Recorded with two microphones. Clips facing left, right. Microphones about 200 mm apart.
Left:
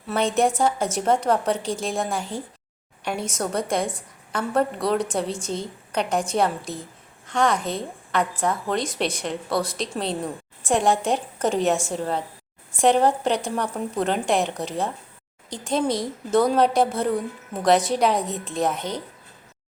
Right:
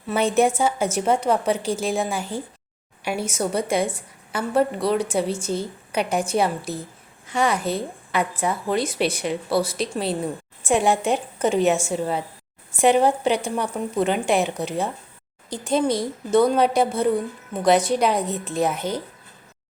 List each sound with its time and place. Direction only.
0.1 s speech: 5° right (ahead or behind)